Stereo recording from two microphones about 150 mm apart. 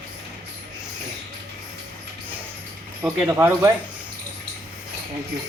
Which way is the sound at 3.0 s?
10° right (ahead or behind).